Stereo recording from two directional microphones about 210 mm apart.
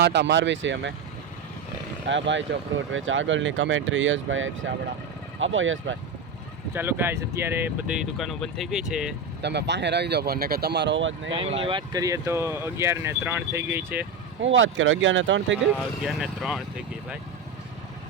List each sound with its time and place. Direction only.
0.0 s speech: 55° right (ahead or behind)
2.0 s speech: 60° right (ahead or behind)
6.7 s speech: 10° right (ahead or behind)
9.4 s speech: 55° right (ahead or behind)
11.3 s speech: 25° right (ahead or behind); by 14.1 s 10° right (ahead or behind)
14.4 s speech: 65° right (ahead or behind)
16.0 s speech: centre (ahead or behind)